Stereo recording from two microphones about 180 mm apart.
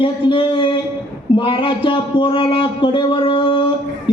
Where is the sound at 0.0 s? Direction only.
30° left (ahead or behind).